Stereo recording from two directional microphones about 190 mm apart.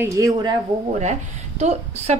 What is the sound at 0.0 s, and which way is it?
Speech, 20° right (ahead or behind).